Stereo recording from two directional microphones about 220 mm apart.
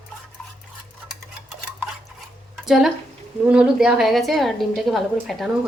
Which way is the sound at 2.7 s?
Centre (ahead or behind).